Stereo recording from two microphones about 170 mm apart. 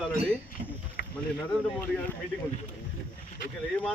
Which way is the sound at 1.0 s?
60° left (ahead or behind).